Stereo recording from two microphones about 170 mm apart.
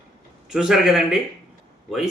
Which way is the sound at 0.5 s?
Centre (ahead or behind).